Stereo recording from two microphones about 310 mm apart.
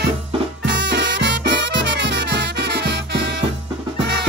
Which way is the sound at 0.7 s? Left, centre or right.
Right.